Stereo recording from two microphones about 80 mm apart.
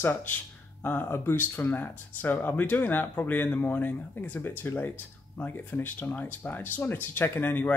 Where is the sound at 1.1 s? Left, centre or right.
Left.